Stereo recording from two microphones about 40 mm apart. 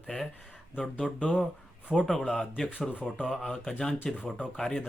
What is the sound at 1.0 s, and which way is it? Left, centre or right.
Speech, left.